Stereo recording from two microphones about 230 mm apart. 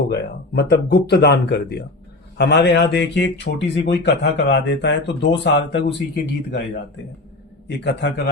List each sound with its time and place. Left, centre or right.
0.1 s speech: left
7.7 s speech: left